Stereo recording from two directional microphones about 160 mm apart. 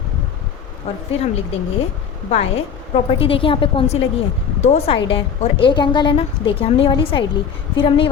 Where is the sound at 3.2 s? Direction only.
35° left (ahead or behind).